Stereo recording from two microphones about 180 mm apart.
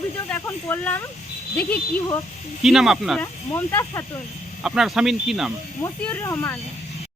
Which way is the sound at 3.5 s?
10° left (ahead or behind).